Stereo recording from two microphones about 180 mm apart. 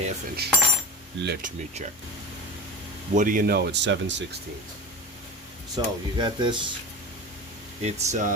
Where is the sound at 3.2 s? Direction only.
50° right (ahead or behind); by 4.4 s 75° right (ahead or behind).